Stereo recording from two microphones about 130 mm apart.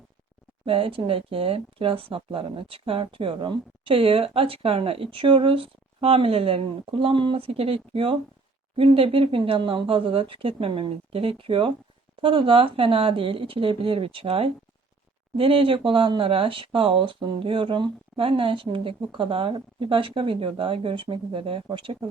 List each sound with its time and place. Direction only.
0.6 s speech: 45° right (ahead or behind)